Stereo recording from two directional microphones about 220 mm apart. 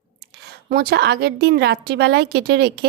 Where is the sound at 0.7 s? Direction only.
45° right (ahead or behind).